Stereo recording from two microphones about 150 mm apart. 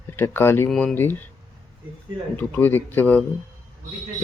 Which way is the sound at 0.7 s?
Centre (ahead or behind).